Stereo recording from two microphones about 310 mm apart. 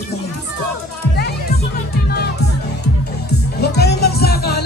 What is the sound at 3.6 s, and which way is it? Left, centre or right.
Music, left.